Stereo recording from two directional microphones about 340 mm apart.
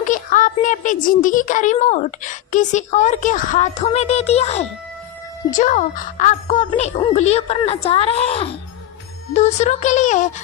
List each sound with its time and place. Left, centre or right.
0.0 s speech: left